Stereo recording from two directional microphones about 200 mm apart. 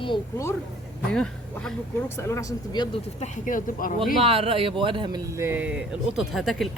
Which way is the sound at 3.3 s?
40° left (ahead or behind).